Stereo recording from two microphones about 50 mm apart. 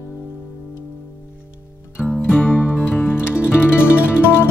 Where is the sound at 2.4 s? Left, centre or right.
Left.